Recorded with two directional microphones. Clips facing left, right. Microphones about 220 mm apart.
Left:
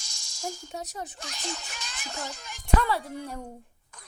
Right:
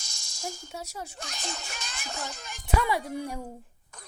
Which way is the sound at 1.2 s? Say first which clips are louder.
Left 1 dB; 50° right (ahead or behind).